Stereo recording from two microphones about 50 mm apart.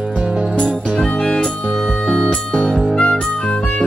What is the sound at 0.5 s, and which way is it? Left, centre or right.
Music, centre.